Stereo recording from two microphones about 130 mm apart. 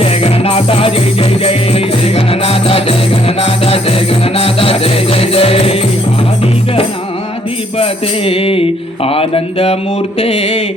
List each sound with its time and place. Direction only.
0.0 s music: 50° left (ahead or behind)
7.8 s music: 45° left (ahead or behind)
9.0 s speech: 45° left (ahead or behind)